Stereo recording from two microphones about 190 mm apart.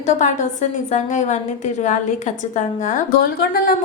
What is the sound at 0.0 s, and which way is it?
A woman's voice, 40° left (ahead or behind).